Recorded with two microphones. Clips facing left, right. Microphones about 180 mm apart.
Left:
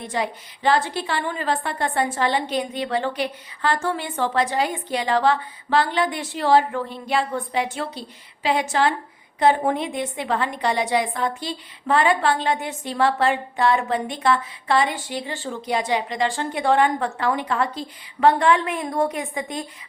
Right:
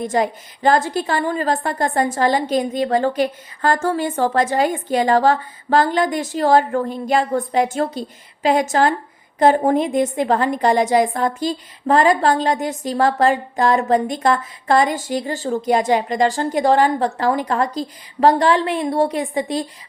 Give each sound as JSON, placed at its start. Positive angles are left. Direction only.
{"t": 0.0, "sound": "a woman's voice", "side_deg": -45}